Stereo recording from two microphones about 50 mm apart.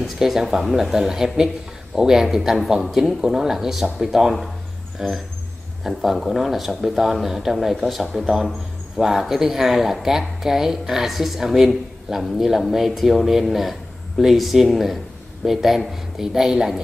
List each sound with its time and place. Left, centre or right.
0.0 s speech: centre